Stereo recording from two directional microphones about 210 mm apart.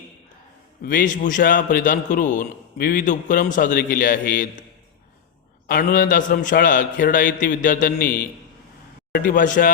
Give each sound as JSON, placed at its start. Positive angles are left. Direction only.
{"t": 0.9, "sound": "a man's voice", "side_deg": 40}
{"t": 5.6, "sound": "a man's voice", "side_deg": 40}